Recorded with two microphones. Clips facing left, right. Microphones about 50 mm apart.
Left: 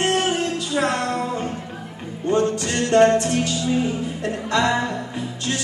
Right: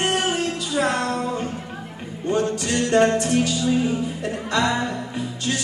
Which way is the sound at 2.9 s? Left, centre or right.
Centre.